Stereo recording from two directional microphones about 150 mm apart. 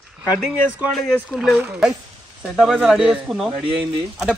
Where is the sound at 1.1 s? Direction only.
Centre (ahead or behind).